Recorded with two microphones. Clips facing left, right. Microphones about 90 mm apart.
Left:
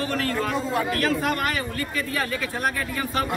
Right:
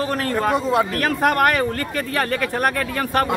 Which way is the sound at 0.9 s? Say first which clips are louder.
Right 4 dB; 55° right (ahead or behind).